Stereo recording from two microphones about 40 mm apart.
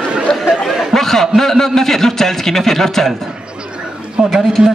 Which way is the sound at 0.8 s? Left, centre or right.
Centre.